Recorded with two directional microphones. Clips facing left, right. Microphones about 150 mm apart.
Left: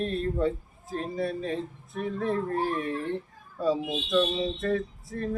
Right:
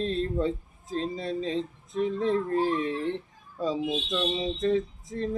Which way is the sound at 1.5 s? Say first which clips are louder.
Right 3 dB; 20° right (ahead or behind).